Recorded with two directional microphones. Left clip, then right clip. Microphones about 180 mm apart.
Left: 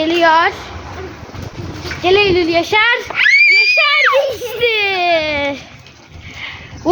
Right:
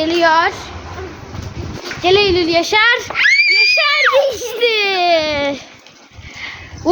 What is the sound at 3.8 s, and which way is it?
A child's voice, 35° right (ahead or behind).